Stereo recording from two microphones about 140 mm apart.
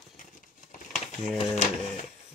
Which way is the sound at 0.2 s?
65° left (ahead or behind).